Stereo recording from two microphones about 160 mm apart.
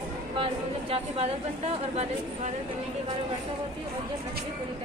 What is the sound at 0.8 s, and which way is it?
A woman's voice, 40° right (ahead or behind).